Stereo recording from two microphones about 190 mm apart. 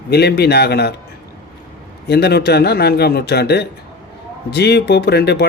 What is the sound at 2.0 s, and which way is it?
Speech, 60° left (ahead or behind).